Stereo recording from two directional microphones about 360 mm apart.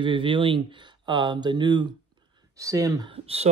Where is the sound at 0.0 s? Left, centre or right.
Centre.